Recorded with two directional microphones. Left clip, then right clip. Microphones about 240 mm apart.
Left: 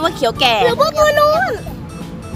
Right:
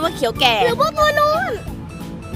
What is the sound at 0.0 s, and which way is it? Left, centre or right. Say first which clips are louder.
Speech: left 2 dB; centre.